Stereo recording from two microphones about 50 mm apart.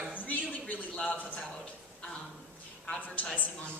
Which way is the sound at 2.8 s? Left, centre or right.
Left.